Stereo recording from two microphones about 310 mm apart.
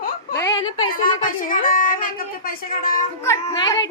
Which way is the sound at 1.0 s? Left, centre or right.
Left.